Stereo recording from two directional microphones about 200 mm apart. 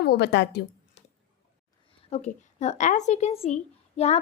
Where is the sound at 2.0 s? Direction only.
35° left (ahead or behind).